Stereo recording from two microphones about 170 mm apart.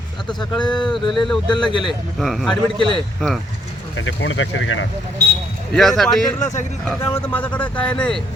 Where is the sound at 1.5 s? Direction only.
30° left (ahead or behind).